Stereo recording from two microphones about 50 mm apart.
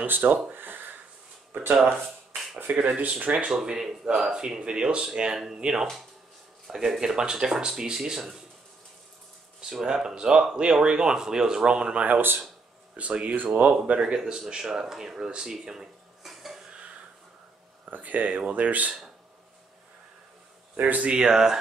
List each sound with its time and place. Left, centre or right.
0.0 s speech: right
0.5 s a sound: right
1.5 s speech: right
2.8 s speech: right
3.5 s speech: centre
9.6 s speech: centre
17.8 s speech: right
20.7 s speech: right
21.2 s speech: centre